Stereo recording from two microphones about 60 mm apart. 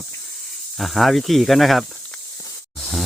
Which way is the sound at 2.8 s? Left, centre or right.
Centre.